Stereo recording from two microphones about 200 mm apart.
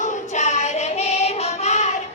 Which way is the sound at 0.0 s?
35° left (ahead or behind).